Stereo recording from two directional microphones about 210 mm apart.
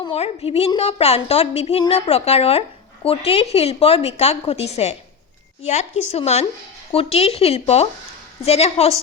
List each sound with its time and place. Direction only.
0.0 s a woman's voice: 25° left (ahead or behind)
6.1 s a woman's voice: 30° left (ahead or behind)